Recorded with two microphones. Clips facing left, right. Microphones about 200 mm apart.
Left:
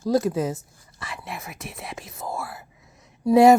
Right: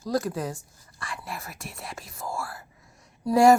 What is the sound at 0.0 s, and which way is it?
Speech, 25° left (ahead or behind).